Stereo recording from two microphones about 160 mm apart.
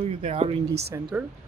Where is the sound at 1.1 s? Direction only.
10° right (ahead or behind).